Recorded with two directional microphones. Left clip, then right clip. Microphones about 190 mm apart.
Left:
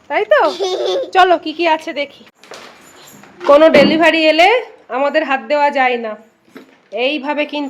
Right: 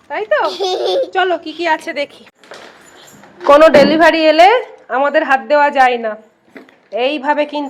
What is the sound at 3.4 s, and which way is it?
A woman's voice, 5° right (ahead or behind).